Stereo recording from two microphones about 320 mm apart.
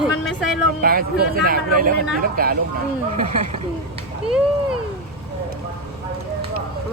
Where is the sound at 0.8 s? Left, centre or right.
Right.